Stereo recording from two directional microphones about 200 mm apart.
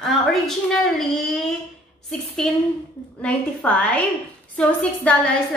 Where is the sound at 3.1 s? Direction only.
5° left (ahead or behind).